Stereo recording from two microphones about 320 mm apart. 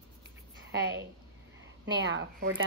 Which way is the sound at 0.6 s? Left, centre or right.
Right.